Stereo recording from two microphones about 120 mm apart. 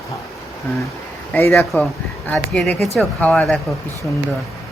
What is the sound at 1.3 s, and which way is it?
Speech, 20° left (ahead or behind).